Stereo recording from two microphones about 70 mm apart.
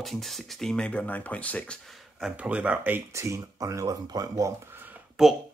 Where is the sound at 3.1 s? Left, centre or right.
Right.